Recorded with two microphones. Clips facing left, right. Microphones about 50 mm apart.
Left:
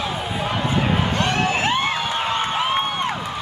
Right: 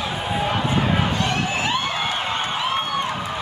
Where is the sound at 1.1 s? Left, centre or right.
Left.